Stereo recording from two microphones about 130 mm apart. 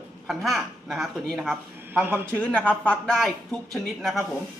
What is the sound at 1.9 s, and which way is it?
Speech, 15° right (ahead or behind).